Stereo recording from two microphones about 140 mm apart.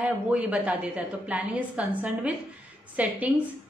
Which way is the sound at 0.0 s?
10° right (ahead or behind).